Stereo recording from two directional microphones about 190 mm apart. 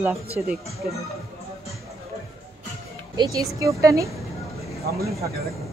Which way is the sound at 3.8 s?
15° right (ahead or behind).